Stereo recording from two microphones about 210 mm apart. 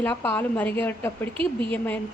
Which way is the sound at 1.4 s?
25° right (ahead or behind).